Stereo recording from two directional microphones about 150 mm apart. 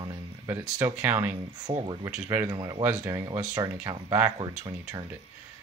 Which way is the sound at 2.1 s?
15° right (ahead or behind).